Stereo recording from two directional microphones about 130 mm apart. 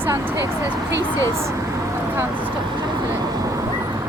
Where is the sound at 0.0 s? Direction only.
20° right (ahead or behind).